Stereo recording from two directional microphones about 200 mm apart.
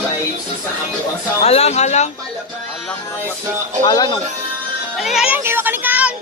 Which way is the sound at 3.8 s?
20° left (ahead or behind).